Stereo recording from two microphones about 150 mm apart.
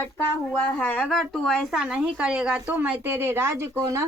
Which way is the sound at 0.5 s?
10° left (ahead or behind).